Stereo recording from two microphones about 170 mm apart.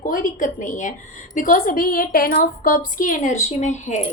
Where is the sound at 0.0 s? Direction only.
50° left (ahead or behind).